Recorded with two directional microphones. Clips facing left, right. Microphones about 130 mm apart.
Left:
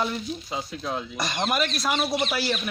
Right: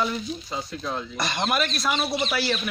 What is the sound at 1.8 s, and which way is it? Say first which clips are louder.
Speech: even; 45° left (ahead or behind).